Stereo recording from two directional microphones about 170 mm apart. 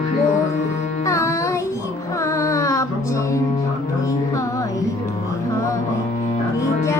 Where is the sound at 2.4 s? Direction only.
20° left (ahead or behind).